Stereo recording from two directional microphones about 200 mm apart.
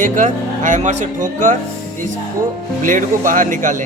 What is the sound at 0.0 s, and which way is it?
Speech, 40° right (ahead or behind).